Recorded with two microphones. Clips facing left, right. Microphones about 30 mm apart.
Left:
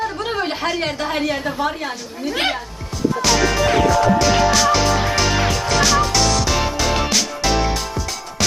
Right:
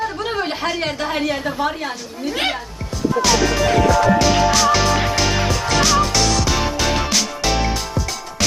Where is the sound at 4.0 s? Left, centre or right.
Centre.